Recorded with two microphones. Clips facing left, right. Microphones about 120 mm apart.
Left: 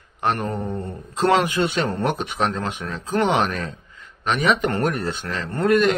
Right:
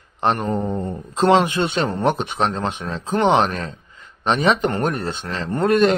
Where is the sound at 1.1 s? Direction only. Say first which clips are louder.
Right 3 dB; 25° right (ahead or behind).